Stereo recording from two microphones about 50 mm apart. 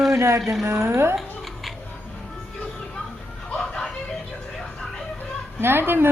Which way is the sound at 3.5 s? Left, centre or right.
Centre.